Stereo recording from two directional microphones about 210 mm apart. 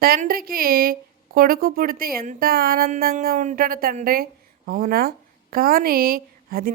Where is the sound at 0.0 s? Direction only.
45° right (ahead or behind).